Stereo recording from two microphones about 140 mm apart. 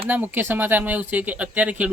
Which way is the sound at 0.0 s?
15° right (ahead or behind).